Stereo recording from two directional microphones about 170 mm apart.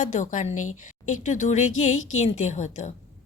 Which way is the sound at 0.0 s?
45° left (ahead or behind).